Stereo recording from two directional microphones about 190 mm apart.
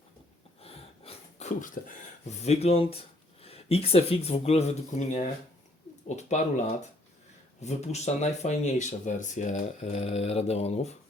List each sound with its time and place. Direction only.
0.6 s a sound: 30° left (ahead or behind)
2.4 s speech: 35° left (ahead or behind)
7.6 s speech: 35° left (ahead or behind)